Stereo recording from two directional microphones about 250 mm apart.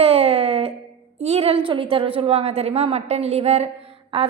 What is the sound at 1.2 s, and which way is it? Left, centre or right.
A woman's voice, right.